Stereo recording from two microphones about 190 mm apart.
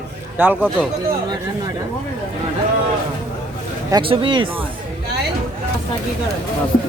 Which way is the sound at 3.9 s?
25° right (ahead or behind).